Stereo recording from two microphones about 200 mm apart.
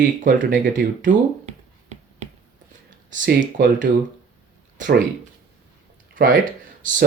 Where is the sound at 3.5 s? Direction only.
40° right (ahead or behind).